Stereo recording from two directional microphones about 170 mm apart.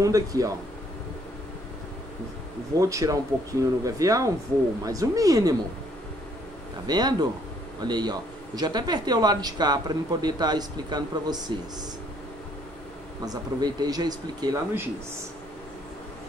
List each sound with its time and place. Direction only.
0.0 s speech: 20° right (ahead or behind)
2.8 s speech: 20° right (ahead or behind)
6.9 s speech: 25° right (ahead or behind)
13.2 s speech: 20° right (ahead or behind)